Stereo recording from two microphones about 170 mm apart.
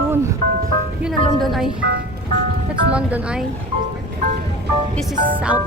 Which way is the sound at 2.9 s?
10° right (ahead or behind).